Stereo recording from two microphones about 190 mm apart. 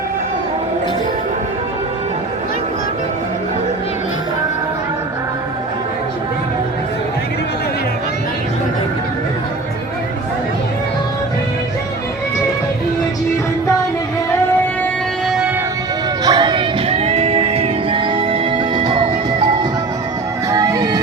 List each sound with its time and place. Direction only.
16.2 s music: 20° right (ahead or behind)
20.5 s music: 20° right (ahead or behind)